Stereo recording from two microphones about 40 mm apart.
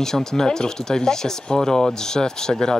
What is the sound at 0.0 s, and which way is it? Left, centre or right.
Speech, centre.